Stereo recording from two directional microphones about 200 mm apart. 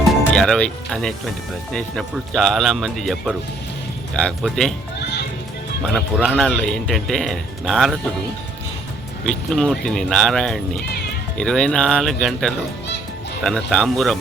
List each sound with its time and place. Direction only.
0.0 s speech: 5° left (ahead or behind)
4.9 s music: 55° left (ahead or behind)
5.9 s speech: centre (ahead or behind)
9.2 s speech: 5° left (ahead or behind)